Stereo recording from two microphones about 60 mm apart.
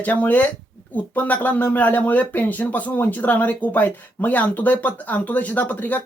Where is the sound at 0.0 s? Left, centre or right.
Left.